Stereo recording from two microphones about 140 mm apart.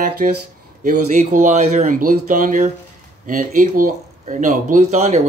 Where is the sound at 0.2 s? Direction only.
85° right.